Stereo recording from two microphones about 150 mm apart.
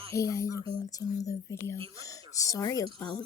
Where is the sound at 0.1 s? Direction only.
20° left (ahead or behind).